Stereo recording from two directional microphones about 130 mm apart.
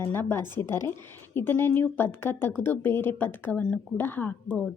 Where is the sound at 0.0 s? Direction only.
15° left (ahead or behind).